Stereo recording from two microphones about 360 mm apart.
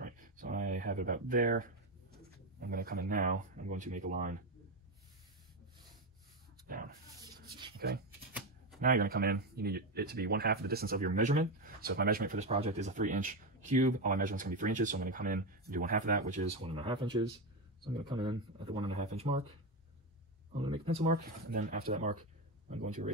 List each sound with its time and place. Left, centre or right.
0.0 s a sound: right
2.6 s speech: right
7.7 s shuffling cards: right
8.8 s speech: right
20.6 s speech: centre